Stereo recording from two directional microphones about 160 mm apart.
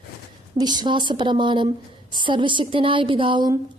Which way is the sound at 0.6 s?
25° right (ahead or behind).